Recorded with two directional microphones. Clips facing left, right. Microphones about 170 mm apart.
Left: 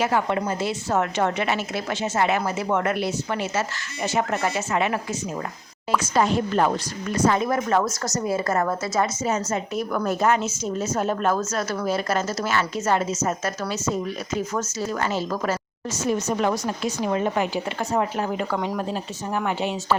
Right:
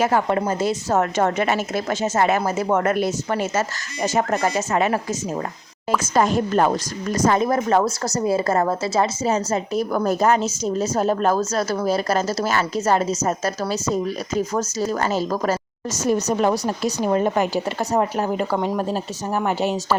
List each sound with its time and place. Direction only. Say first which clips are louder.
0.0 s a woman's voice: right 3 dB; 45° right (ahead or behind)
6.0 s a woman's voice: right 3 dB; 45° right (ahead or behind)